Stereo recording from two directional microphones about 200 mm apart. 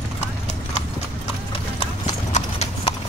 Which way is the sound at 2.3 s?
30° left (ahead or behind).